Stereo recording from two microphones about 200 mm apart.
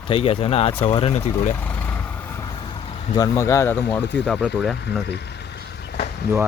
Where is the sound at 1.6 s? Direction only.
10° left (ahead or behind).